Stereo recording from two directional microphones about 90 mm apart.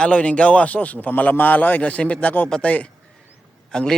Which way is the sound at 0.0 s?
10° left (ahead or behind).